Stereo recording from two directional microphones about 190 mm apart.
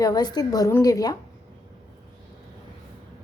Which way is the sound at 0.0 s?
20° left (ahead or behind).